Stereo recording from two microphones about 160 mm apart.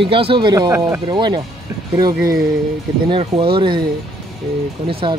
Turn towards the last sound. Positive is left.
turn(degrees=-30)  # may be behind; listen again after turning